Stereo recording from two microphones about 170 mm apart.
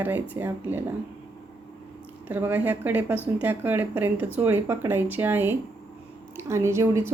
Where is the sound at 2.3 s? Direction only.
10° right (ahead or behind).